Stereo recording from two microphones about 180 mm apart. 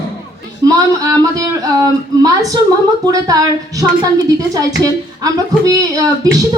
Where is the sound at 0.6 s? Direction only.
20° right (ahead or behind).